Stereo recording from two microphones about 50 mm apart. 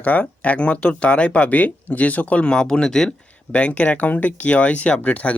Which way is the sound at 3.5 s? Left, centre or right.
Left.